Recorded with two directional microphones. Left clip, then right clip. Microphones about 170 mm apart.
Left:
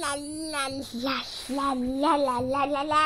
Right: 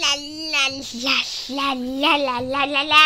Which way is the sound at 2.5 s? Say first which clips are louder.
Right 5 dB; 5° right (ahead or behind).